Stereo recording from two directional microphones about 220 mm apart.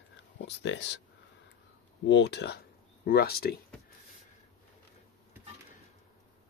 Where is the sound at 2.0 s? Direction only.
50° left (ahead or behind).